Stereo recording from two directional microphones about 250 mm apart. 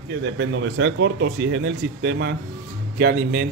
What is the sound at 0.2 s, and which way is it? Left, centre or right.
Speech, right.